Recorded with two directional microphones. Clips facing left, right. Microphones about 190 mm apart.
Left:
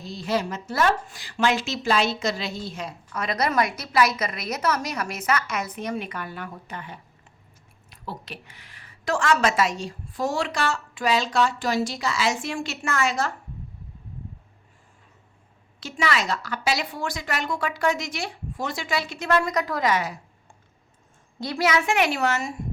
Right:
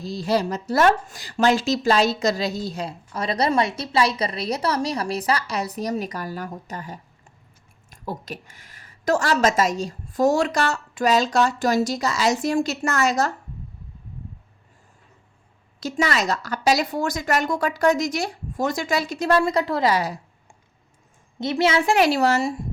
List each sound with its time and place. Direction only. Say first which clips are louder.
0.0 s a woman's voice: right 4 dB; 35° right (ahead or behind)
15.8 s a woman's voice: right 3 dB; 40° right (ahead or behind)
21.3 s a woman's voice: right 3 dB; 20° right (ahead or behind)